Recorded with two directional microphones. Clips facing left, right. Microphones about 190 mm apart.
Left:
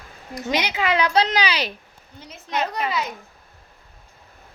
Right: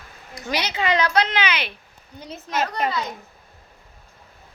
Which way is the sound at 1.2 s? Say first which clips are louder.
Left 2 dB; 35° left (ahead or behind).